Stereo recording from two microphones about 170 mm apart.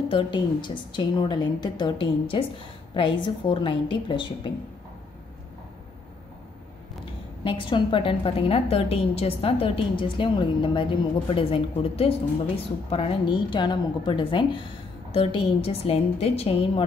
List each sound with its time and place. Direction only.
0.1 s a woman's voice: 30° left (ahead or behind)
7.4 s a woman's voice: 30° left (ahead or behind)